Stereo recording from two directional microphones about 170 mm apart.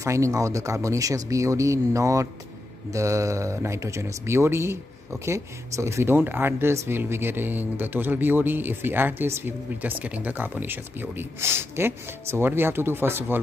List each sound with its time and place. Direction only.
0.0 s speech: 15° right (ahead or behind)